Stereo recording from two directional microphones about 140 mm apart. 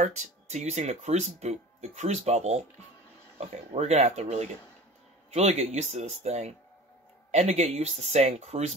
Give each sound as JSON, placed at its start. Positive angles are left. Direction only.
{"t": 0.0, "sound": "speech", "side_deg": -55}